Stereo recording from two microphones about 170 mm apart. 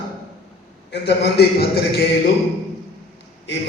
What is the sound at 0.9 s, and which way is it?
A man's voice, 80° left.